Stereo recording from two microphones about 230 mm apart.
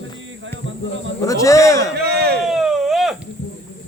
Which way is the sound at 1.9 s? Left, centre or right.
Right.